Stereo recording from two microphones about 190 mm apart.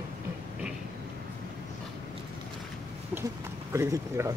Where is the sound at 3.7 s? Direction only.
15° right (ahead or behind).